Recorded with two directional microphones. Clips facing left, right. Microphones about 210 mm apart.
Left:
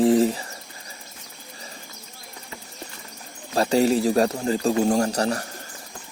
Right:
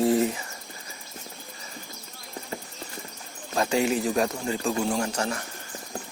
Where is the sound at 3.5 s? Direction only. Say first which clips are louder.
Left 5 dB; 35° left (ahead or behind).